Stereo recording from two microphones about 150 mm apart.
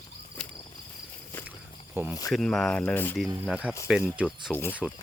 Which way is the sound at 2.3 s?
Centre (ahead or behind).